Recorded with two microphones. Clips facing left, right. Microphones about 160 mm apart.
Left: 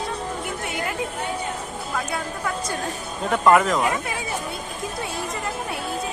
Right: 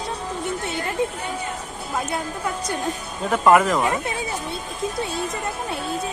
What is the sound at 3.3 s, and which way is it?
Speech, 5° right (ahead or behind).